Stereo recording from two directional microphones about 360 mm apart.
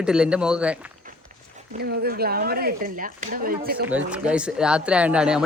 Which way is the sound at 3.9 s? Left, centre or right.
Centre.